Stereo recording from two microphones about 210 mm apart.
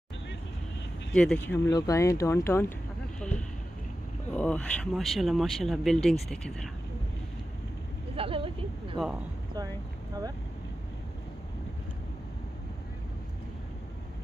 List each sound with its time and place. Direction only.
1.1 s speech: 5° left (ahead or behind)
1.7 s speech: 15° left (ahead or behind)
4.3 s speech: 5° left (ahead or behind)
8.2 s speech: 25° right (ahead or behind)